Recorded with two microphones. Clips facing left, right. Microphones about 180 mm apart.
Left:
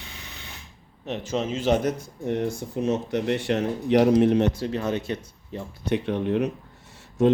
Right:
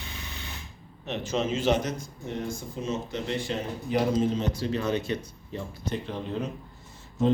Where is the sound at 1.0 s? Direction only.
45° left (ahead or behind).